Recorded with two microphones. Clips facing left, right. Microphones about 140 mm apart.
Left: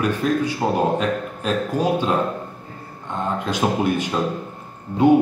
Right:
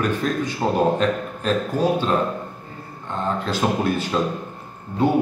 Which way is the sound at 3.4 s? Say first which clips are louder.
Left 2 dB; 15° left (ahead or behind).